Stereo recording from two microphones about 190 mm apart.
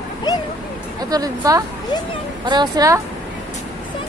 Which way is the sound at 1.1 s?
20° right (ahead or behind).